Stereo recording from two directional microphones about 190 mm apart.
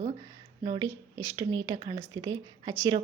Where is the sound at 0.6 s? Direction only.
20° right (ahead or behind).